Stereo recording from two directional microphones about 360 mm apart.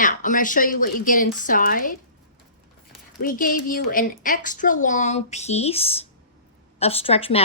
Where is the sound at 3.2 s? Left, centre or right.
Left.